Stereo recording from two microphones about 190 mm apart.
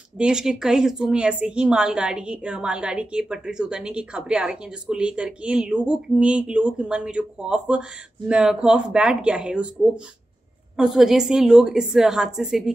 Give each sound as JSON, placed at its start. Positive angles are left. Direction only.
{"t": 0.2, "sound": "a woman's voice", "side_deg": -5}
{"t": 10.8, "sound": "a woman's voice", "side_deg": 0}